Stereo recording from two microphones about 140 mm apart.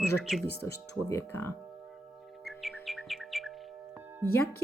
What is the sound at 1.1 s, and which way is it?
Music, 20° left (ahead or behind).